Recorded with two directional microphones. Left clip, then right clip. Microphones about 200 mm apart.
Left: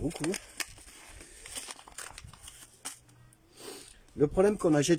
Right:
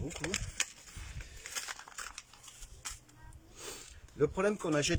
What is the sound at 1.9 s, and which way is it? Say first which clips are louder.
Crumpling: right 1 dB; 30° left (ahead or behind).